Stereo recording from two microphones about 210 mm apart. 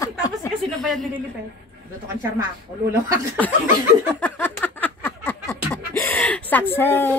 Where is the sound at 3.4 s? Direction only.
10° left (ahead or behind).